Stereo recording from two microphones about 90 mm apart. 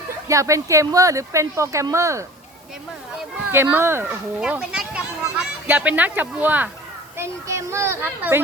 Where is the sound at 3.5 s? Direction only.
25° right (ahead or behind).